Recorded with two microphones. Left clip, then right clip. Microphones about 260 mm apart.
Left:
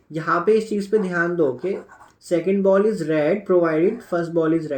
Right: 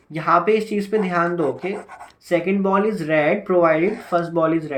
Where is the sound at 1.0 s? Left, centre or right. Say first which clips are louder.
Right 2 dB; right.